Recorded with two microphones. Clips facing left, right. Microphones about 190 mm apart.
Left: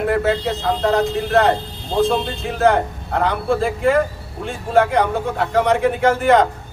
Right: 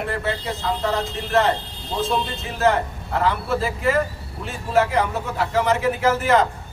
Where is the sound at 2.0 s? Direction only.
60° left (ahead or behind).